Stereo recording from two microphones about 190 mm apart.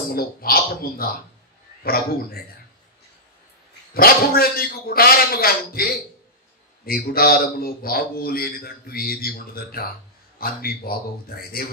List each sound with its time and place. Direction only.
0.1 s a man's voice: 50° left (ahead or behind)
3.9 s a man's voice: 50° left (ahead or behind)